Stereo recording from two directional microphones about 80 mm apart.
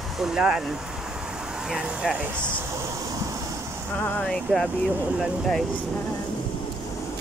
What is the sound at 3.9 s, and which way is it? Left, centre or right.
Speech, centre.